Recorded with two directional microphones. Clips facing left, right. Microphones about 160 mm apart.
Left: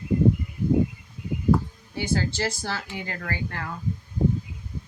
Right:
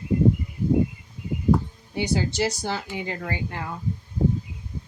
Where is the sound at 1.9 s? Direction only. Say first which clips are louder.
Right 2 dB; 15° right (ahead or behind).